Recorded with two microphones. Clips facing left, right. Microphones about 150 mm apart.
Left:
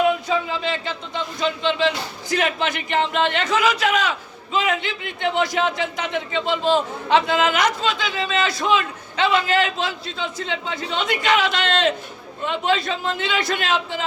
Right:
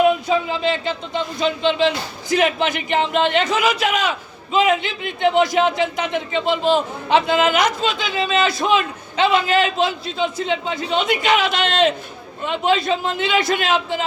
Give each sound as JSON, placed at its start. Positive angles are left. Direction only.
{"t": 0.3, "sound": "a man's voice", "side_deg": -20}